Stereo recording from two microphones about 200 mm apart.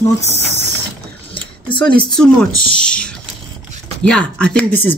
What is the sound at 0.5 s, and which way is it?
Mechanisms, 60° right (ahead or behind).